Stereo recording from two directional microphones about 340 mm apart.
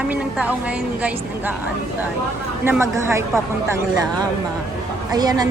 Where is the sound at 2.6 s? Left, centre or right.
Centre.